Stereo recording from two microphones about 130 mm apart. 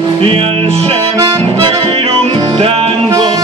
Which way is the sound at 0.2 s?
45° right (ahead or behind).